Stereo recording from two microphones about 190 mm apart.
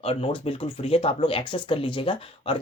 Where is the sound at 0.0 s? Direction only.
30° left (ahead or behind).